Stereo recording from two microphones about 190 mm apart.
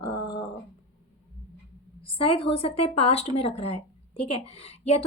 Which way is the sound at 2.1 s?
30° left (ahead or behind).